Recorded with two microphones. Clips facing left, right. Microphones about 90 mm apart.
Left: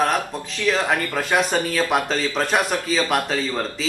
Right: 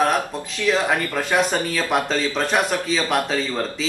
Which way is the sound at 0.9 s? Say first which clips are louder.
Even; 15° left (ahead or behind).